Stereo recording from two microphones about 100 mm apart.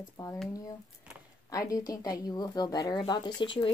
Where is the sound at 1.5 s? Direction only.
35° left (ahead or behind); by 3.7 s 55° left (ahead or behind).